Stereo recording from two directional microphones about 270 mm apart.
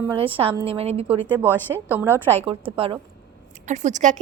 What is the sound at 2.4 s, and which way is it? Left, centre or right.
A woman's voice, centre.